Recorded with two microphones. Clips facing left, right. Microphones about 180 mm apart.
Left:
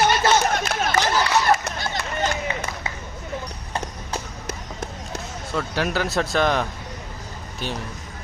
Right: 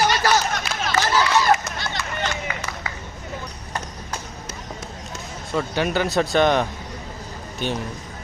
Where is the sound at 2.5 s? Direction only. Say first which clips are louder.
Left 3 dB; 25° left (ahead or behind).